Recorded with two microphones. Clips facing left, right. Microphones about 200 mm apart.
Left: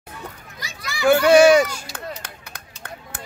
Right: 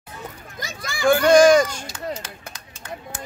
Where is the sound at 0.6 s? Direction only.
50° right (ahead or behind).